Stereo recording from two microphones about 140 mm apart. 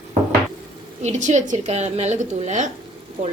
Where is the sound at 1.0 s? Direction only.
60° right (ahead or behind).